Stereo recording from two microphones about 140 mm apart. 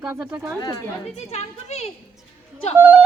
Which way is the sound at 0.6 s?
25° left (ahead or behind).